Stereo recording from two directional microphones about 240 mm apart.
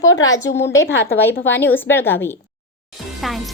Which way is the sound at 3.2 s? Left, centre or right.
Centre.